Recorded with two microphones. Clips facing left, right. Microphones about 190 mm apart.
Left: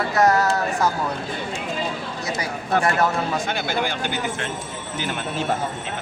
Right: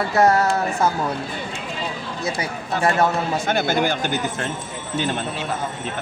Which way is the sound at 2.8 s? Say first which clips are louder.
Right 6 dB; 25° right (ahead or behind).